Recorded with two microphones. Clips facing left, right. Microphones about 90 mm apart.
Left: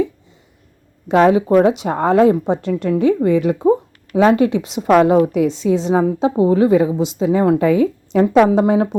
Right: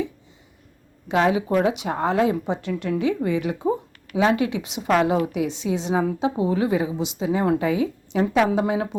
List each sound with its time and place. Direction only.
1.0 s a woman's voice: 45° left (ahead or behind)
4.9 s a woman's voice: 50° left (ahead or behind); by 7.6 s 35° left (ahead or behind)
7.6 s a woman's voice: 45° left (ahead or behind)